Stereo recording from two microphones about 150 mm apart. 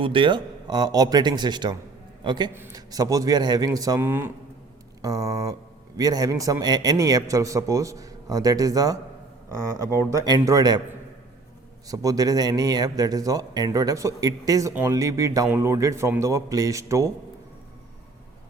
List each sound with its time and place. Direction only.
0.0 s a man's voice: 35° right (ahead or behind); by 4.3 s 15° right (ahead or behind)
5.0 s a man's voice: 25° right (ahead or behind)
9.5 s speech: 20° left (ahead or behind)
10.1 s a man's voice: 25° right (ahead or behind)
11.9 s a man's voice: 25° right (ahead or behind)